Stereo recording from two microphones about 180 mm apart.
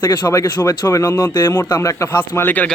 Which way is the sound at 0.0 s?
25° left (ahead or behind).